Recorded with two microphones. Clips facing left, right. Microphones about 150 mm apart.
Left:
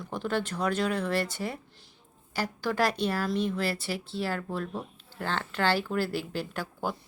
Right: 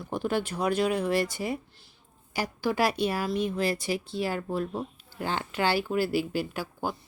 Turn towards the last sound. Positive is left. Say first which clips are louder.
# right 1 dB
turn(degrees=-10)  # may be behind; listen again after turning